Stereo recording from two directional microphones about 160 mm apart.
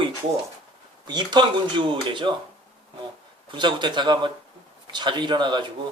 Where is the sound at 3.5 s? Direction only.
30° right (ahead or behind).